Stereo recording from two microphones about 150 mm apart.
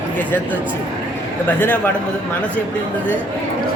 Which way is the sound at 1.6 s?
10° left (ahead or behind).